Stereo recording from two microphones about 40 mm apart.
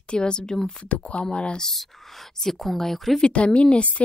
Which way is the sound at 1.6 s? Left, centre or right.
Centre.